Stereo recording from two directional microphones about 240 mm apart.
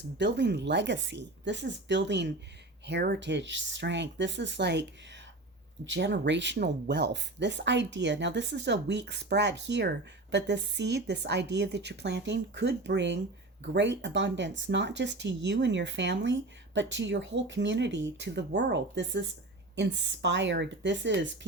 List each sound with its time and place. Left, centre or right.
0.2 s speech: right